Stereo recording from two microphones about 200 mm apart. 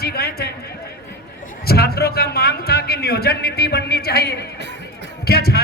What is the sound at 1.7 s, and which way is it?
A man's voice, 50° left (ahead or behind).